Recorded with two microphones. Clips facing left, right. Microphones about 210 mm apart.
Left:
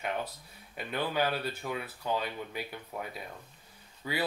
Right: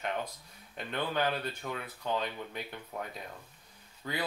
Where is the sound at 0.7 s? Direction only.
5° left (ahead or behind).